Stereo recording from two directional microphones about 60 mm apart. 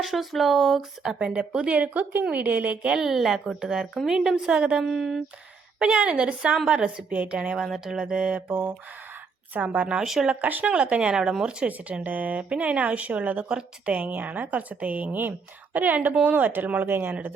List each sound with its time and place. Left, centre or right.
0.0 s speech: centre
1.0 s speech: centre
3.1 s a woman's voice: centre
4.8 s speech: centre
5.8 s a woman's voice: centre
7.6 s speech: centre
7.9 s a woman's voice: centre
8.4 s speech: right
9.8 s a woman's voice: centre
10.4 s speech: right